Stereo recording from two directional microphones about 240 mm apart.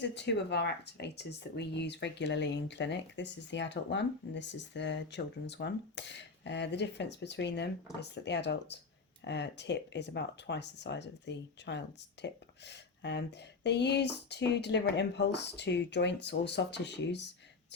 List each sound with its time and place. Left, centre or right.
0.0 s speech: left